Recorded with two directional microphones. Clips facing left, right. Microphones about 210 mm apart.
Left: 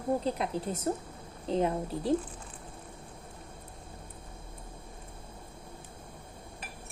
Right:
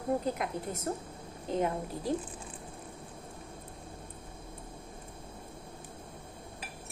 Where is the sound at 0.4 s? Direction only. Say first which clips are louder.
Left 3 dB; 30° left (ahead or behind).